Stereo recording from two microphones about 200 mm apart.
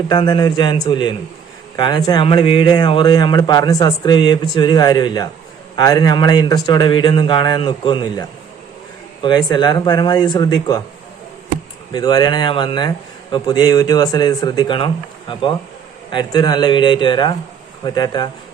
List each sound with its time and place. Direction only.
0.1 s speech: 20° left (ahead or behind)
11.9 s speech: 20° left (ahead or behind)